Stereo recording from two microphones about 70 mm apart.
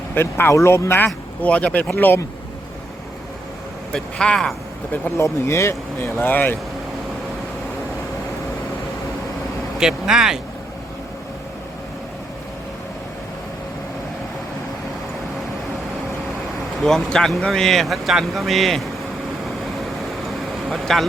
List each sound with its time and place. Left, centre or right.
0.1 s speech: left
3.9 s speech: centre
5.1 s speech: left
9.7 s speech: centre
16.8 s speech: centre
20.7 s speech: centre